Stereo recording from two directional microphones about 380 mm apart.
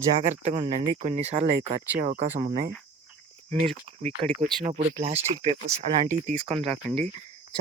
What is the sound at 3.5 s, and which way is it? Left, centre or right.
Speech, centre.